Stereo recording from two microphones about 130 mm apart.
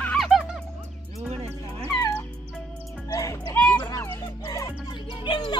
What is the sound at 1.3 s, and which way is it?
Music, 50° right (ahead or behind).